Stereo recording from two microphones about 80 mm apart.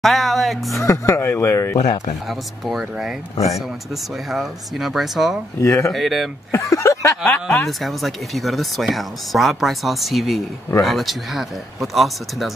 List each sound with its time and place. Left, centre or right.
0.0 s speech: centre
0.7 s speech: left
2.2 s speech: centre
4.3 s speech: centre
5.6 s speech: left
5.9 s speech: centre
6.5 s speech: left
7.2 s speech: centre
7.6 s speech: centre